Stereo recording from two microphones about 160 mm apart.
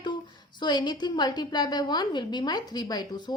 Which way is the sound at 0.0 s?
30° left (ahead or behind).